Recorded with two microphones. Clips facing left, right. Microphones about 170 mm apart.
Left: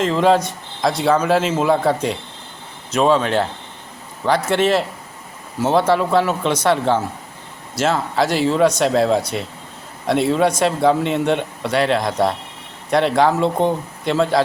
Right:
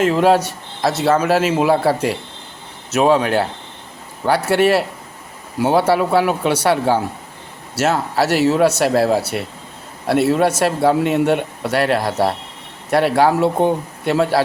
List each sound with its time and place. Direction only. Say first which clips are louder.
0.0 s a man's voice: right 2 dB; 5° right (ahead or behind)